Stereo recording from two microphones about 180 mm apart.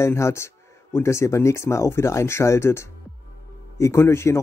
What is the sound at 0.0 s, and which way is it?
A man's voice, 15° left (ahead or behind).